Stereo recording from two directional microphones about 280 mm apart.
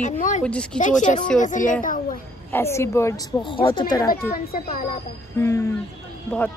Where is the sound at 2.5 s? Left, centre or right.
Centre.